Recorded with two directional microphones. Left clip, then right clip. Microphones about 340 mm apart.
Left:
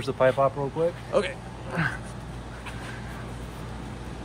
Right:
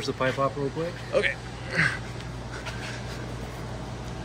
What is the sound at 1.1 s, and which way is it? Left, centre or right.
Speech, centre.